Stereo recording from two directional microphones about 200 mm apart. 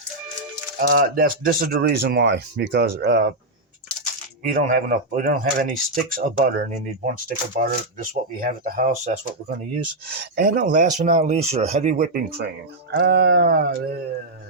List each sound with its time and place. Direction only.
0.8 s speech: 45° right (ahead or behind)
4.4 s speech: 40° right (ahead or behind)